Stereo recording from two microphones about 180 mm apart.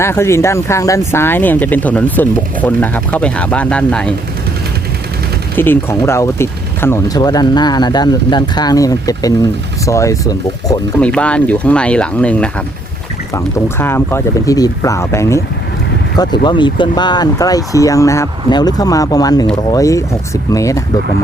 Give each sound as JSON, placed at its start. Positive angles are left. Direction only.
{"t": 0.0, "sound": "speech", "side_deg": 15}
{"t": 5.5, "sound": "speech", "side_deg": 10}
{"t": 11.0, "sound": "speech", "side_deg": 5}